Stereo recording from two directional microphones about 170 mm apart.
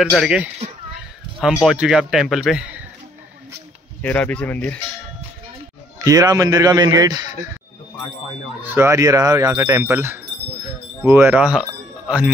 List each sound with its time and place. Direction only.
0.2 s a man's voice: 5° right (ahead or behind)
4.0 s speech: 10° left (ahead or behind)
5.9 s a man's voice: 20° right (ahead or behind)
8.6 s speech: 15° right (ahead or behind)